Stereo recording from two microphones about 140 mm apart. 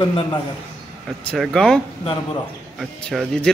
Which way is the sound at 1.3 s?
5° left (ahead or behind).